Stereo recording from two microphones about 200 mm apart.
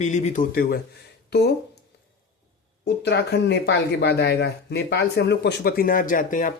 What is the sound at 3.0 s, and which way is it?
Speech, 60° left (ahead or behind).